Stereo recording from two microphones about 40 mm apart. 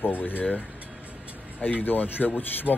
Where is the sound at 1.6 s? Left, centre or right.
Left.